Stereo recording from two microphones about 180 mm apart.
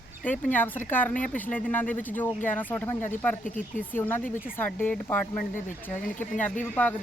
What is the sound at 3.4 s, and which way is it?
Speech, 45° left (ahead or behind).